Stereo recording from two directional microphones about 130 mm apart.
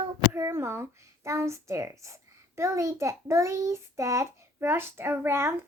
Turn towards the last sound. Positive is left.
turn(degrees=-20)  # may be behind; listen again after turning